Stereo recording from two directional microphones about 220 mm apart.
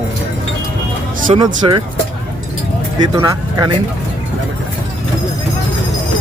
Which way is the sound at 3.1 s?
15° right (ahead or behind).